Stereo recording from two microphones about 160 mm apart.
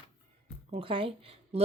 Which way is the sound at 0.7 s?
35° right (ahead or behind).